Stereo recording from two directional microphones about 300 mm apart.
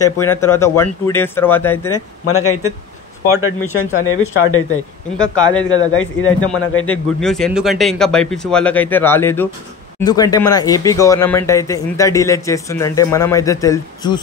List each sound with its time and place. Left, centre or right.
0.0 s speech: centre
2.2 s speech: left
3.7 s speech: left
5.8 s speech: left
6.9 s speech: centre